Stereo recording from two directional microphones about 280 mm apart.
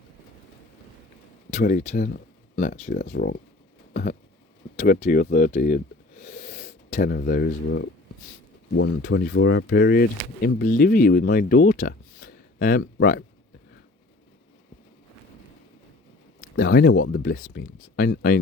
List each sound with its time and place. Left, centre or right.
1.5 s speech: left
3.9 s a sound: left
4.8 s speech: left
16.4 s speech: left